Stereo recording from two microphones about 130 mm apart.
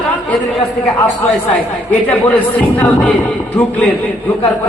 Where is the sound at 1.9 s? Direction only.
10° left (ahead or behind).